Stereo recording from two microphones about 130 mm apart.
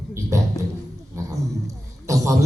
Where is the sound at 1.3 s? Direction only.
25° right (ahead or behind).